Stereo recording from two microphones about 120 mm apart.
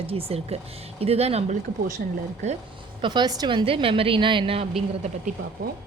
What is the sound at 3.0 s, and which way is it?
A woman's voice, 35° right (ahead or behind).